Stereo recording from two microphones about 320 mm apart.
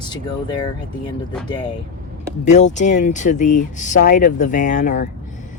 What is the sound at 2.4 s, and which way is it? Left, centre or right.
Speech, left.